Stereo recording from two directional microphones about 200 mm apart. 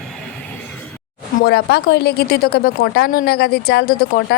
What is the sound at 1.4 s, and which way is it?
Speech, 50° left (ahead or behind).